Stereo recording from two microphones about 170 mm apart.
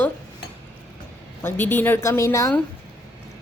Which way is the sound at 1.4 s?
10° left (ahead or behind).